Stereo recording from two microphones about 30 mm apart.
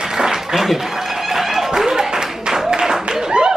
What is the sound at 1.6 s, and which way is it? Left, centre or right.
Applause, centre.